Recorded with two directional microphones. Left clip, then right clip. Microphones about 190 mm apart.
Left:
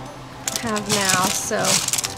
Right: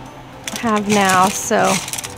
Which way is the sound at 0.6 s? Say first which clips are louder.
Right 7 dB; 45° right (ahead or behind).